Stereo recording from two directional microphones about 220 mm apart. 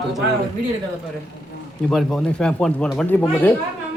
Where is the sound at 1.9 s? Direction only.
Centre (ahead or behind).